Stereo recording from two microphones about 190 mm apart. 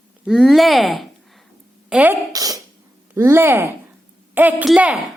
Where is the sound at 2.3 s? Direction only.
20° right (ahead or behind).